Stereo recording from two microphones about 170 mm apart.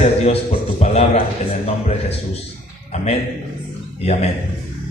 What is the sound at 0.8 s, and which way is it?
Speech, 40° left (ahead or behind).